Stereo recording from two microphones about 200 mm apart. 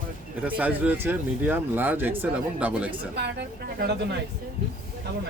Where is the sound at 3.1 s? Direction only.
55° right (ahead or behind).